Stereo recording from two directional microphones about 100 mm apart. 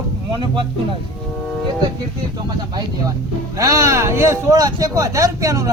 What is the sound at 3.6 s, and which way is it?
Speech, 35° right (ahead or behind).